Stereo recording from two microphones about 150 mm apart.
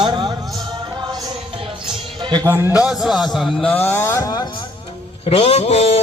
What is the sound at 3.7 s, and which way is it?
Speech, 15° left (ahead or behind).